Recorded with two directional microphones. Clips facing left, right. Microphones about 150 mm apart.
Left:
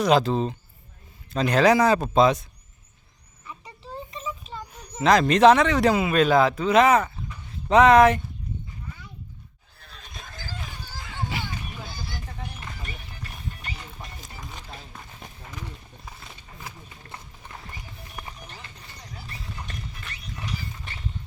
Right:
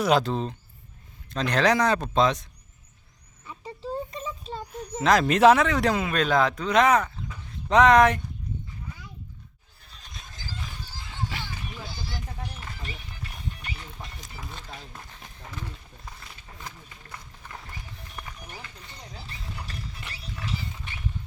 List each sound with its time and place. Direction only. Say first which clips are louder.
0.0 s speech: left 3 dB; centre (ahead or behind)
4.9 s speech: left 2 dB; centre (ahead or behind)
9.8 s a sound: left 4 dB; 60° left (ahead or behind)
13.5 s music: left 1 dB; 40° left (ahead or behind)
14.7 s a sound: even; centre (ahead or behind)
17.1 s clip-clop: left 1 dB; 25° left (ahead or behind)
19.1 s music: left 2 dB; 30° right (ahead or behind)